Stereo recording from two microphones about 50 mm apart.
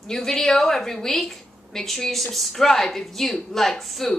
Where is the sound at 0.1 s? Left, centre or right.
Centre.